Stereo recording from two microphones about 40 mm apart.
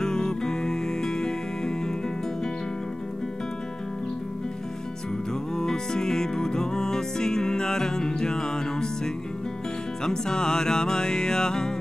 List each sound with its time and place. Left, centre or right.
0.0 s music: centre
5.6 s music: centre